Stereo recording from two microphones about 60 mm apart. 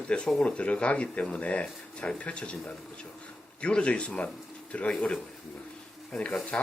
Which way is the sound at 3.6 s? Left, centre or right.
Centre.